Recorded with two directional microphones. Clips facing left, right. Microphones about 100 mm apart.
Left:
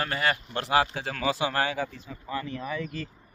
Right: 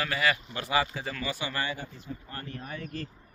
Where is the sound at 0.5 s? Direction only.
70° left (ahead or behind); by 2.2 s 90° left.